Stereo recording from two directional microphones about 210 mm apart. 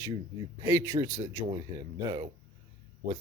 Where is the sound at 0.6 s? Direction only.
15° right (ahead or behind).